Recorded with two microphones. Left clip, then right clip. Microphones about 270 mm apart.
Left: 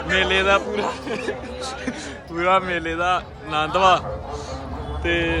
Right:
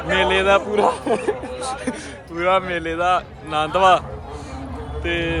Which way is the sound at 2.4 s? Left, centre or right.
Centre.